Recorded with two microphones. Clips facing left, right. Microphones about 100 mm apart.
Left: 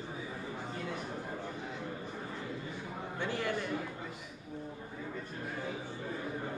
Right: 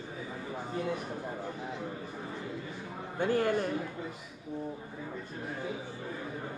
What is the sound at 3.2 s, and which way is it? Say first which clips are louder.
Speech: right 7 dB; 45° right (ahead or behind).